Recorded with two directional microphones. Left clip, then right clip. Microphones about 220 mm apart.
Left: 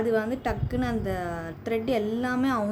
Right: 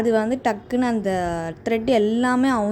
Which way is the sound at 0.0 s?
30° right (ahead or behind).